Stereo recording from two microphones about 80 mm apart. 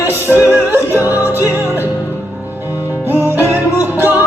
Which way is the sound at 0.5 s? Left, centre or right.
Right.